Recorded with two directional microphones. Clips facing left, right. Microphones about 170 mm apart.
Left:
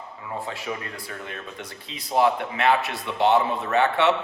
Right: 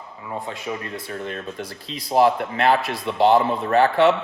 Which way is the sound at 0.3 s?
20° right (ahead or behind).